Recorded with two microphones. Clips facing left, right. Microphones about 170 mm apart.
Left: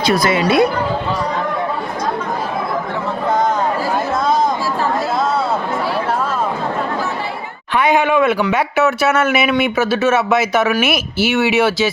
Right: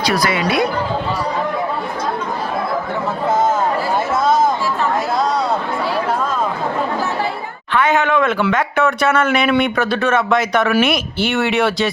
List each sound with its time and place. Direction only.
0.0 s a woman's voice: 25° left (ahead or behind)
7.7 s speech: 15° left (ahead or behind)